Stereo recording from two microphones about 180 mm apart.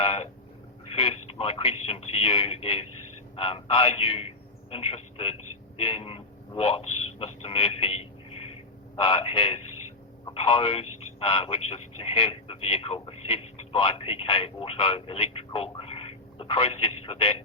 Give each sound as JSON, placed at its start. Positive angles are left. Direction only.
{"t": 0.0, "sound": "a man's voice", "side_deg": 30}